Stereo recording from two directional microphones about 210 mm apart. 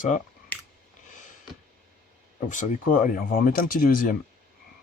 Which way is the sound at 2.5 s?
35° left (ahead or behind).